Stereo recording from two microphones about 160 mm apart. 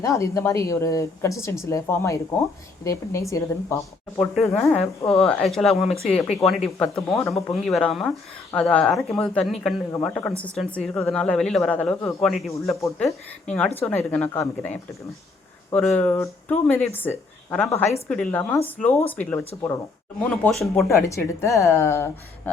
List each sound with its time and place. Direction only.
0.0 s a woman's voice: 20° left (ahead or behind)
4.5 s speech: centre (ahead or behind)
20.8 s speech: 20° left (ahead or behind)